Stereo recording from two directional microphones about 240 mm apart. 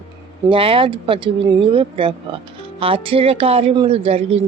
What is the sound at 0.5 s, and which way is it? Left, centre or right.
Speech, right.